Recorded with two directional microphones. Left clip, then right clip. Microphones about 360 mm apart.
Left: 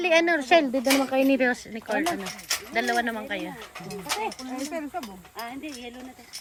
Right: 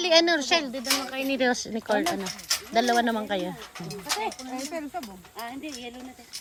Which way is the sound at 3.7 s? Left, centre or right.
Centre.